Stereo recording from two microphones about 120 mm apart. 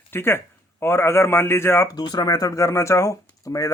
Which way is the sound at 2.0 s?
35° left (ahead or behind).